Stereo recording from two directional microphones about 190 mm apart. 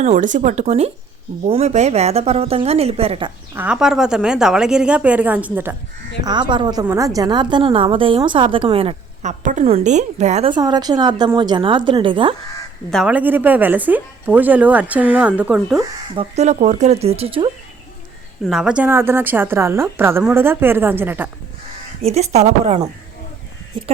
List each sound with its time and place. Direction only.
0.0 s a woman's voice: 40° right (ahead or behind)
3.5 s a woman's voice: 10° right (ahead or behind)
6.2 s a woman's voice: 25° right (ahead or behind)
10.5 s a woman's voice: 20° right (ahead or behind)
12.9 s a woman's voice: centre (ahead or behind)
16.3 s a woman's voice: 35° right (ahead or behind)
18.4 s a woman's voice: 5° right (ahead or behind)
22.0 s a woman's voice: 35° right (ahead or behind)